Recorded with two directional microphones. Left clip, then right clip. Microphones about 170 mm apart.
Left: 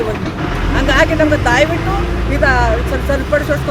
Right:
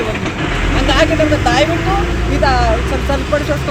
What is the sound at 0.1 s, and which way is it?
Vehicle, 55° right (ahead or behind).